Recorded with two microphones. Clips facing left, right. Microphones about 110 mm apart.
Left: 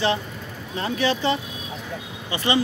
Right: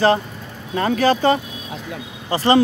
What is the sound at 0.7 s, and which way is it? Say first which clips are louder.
Speech: right 8 dB; 60° right (ahead or behind).